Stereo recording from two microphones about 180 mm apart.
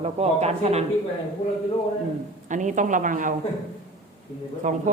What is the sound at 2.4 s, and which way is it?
Speech, 45° right (ahead or behind).